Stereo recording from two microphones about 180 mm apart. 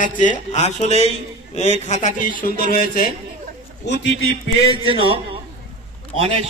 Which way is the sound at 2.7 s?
55° left (ahead or behind).